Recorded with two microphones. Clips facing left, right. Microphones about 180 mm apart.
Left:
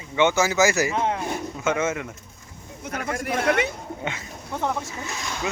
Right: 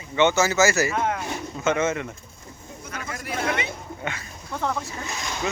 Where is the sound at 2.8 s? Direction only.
55° left (ahead or behind).